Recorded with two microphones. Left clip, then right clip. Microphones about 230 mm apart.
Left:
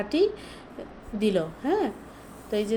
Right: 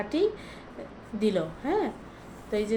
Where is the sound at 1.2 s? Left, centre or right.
Left.